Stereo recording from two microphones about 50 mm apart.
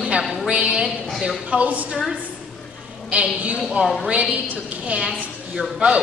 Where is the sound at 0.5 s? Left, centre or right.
Right.